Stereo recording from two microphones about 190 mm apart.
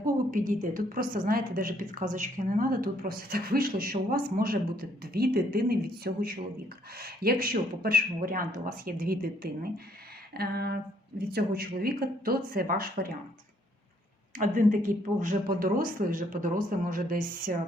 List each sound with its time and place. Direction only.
0.0 s a woman's voice: 45° right (ahead or behind)
10.3 s a sound: 55° right (ahead or behind)
11.2 s a woman's voice: 55° right (ahead or behind)
14.3 s a woman's voice: 45° right (ahead or behind)